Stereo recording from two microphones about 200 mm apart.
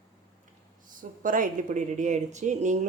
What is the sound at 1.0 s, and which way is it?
A woman's voice, 40° right (ahead or behind).